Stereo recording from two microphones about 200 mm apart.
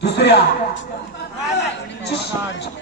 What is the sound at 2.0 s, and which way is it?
Speech, 60° left (ahead or behind).